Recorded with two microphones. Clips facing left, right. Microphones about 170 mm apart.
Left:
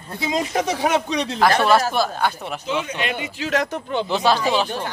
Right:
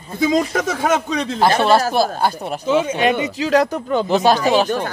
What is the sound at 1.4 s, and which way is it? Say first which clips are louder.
Speech: right 2 dB; 25° right (ahead or behind).